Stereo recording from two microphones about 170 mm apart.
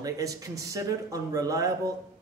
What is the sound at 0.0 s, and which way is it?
Speech, 20° right (ahead or behind).